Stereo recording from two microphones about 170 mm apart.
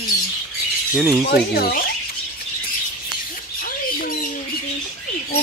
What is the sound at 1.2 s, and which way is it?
Speech, 65° left (ahead or behind).